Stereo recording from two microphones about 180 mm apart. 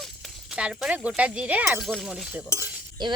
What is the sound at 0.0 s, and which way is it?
Speech, centre (ahead or behind).